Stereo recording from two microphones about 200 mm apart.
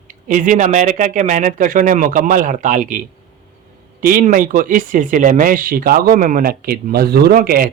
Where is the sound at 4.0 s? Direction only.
40° right (ahead or behind).